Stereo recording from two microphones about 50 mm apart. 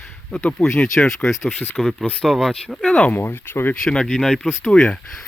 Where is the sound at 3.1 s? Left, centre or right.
Left.